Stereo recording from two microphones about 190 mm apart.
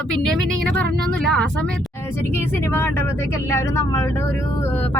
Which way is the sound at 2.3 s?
10° left (ahead or behind).